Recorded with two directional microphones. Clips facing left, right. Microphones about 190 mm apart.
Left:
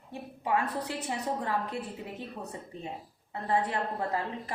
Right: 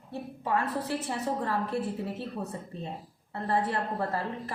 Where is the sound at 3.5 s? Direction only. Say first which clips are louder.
Even; 15° left (ahead or behind).